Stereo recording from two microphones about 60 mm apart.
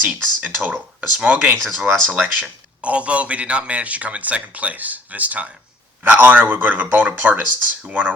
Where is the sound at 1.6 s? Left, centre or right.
Centre.